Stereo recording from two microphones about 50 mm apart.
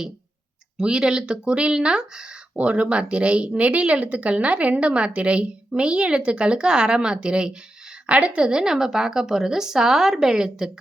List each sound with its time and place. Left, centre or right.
0.8 s a woman's voice: centre